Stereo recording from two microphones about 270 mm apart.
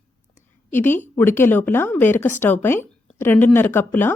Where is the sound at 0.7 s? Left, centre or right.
Centre.